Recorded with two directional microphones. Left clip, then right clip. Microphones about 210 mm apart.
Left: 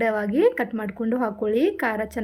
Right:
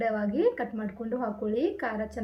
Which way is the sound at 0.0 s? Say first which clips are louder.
Left 6 dB; 50° left (ahead or behind).